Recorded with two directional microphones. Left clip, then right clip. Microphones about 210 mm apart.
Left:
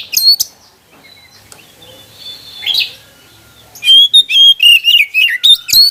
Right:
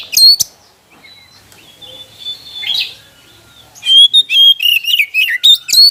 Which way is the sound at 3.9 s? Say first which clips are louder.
Even; 5° left (ahead or behind).